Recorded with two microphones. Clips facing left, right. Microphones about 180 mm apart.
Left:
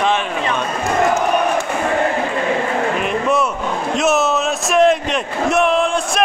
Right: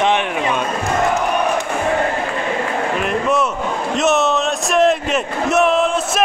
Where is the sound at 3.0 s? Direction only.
Centre (ahead or behind).